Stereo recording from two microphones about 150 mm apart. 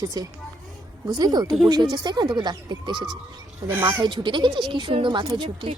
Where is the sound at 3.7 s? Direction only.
15° right (ahead or behind).